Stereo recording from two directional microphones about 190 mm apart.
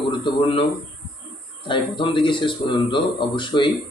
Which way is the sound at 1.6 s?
25° left (ahead or behind).